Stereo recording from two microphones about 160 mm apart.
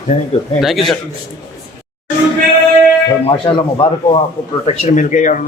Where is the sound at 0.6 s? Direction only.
Centre (ahead or behind).